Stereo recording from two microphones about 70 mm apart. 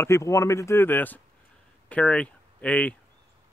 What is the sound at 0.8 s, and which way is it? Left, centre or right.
Speech, left.